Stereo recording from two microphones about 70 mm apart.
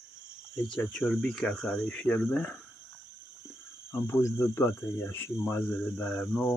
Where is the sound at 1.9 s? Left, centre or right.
Left.